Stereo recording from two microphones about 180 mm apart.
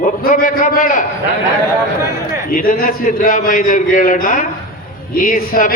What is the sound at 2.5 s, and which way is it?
A man's voice, 50° left (ahead or behind).